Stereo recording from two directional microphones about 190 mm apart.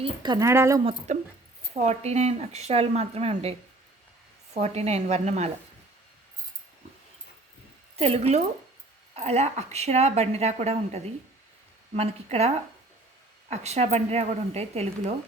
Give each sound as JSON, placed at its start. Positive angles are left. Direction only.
{"t": 0.0, "sound": "speech", "side_deg": -25}
{"t": 0.9, "sound": "a woman's voice", "side_deg": -35}
{"t": 4.5, "sound": "a woman's voice", "side_deg": -35}
{"t": 7.9, "sound": "a woman's voice", "side_deg": -30}
{"t": 13.5, "sound": "a woman's voice", "side_deg": -35}